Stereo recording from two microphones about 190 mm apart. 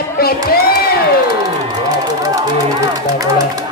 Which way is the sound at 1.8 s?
20° right (ahead or behind).